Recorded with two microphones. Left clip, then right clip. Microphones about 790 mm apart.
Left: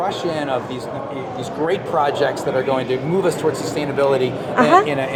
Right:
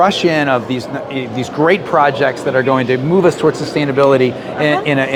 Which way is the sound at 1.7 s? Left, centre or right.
Right.